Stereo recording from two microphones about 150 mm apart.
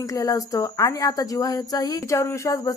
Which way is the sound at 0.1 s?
20° left (ahead or behind).